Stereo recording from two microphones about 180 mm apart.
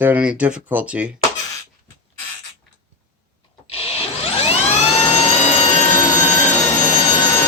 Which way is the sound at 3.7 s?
35° left (ahead or behind).